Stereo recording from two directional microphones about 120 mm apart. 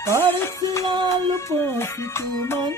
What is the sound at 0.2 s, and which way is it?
Music, 20° left (ahead or behind).